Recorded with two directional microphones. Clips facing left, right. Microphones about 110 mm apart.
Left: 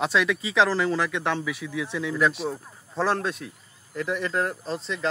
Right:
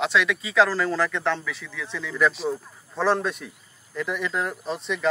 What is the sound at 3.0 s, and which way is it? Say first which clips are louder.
Speech: right 4 dB; centre (ahead or behind).